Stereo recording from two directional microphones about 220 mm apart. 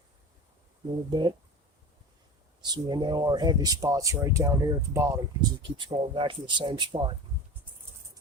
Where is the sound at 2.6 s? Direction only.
20° right (ahead or behind).